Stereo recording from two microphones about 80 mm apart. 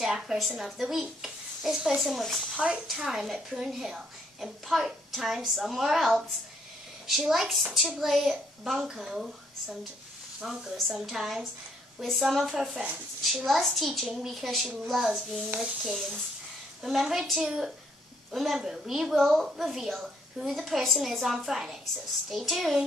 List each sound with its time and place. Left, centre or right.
0.0 s a woman's voice: centre
2.5 s a woman's voice: centre